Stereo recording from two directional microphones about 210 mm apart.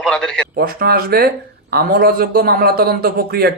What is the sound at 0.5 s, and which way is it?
Speech, 45° right (ahead or behind).